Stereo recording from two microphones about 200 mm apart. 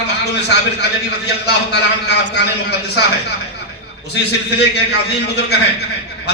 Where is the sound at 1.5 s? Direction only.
55° left (ahead or behind).